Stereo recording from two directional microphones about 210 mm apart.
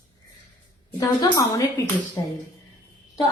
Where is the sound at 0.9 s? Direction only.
20° left (ahead or behind).